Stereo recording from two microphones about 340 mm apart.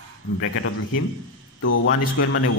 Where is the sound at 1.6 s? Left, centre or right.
Left.